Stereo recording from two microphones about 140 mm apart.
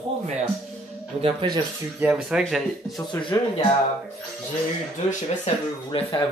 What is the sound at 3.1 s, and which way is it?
Speech, 35° left (ahead or behind).